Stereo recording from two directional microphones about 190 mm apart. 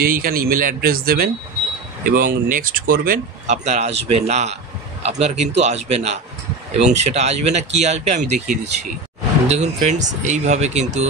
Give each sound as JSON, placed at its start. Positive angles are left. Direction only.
{"t": 0.0, "sound": "speech", "side_deg": -50}